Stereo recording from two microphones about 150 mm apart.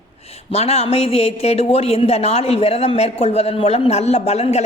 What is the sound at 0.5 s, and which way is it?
A man's voice, 45° left (ahead or behind).